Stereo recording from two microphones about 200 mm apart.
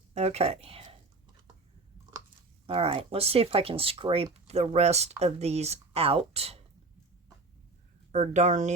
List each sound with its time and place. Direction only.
0.1 s speech: 30° right (ahead or behind)
2.6 s speech: 30° right (ahead or behind)
8.1 s speech: 35° right (ahead or behind)